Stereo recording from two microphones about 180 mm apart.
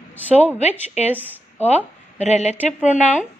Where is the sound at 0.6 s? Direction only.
40° left (ahead or behind).